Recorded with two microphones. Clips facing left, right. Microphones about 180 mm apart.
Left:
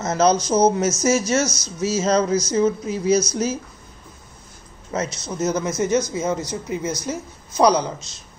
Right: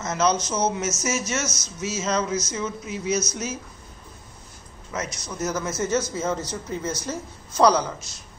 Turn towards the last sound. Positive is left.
turn(degrees=15)  # may be behind; listen again after turning